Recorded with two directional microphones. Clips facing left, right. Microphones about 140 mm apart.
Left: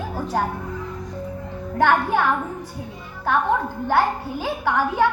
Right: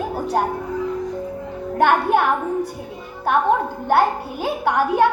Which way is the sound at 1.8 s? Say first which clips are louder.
Right 2 dB; 20° right (ahead or behind).